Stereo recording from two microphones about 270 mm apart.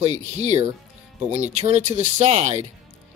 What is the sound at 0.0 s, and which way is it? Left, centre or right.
Speech, right.